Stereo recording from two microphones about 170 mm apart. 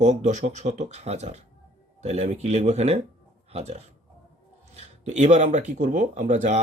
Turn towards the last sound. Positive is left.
turn(degrees=-45)  # may be behind; listen again after turning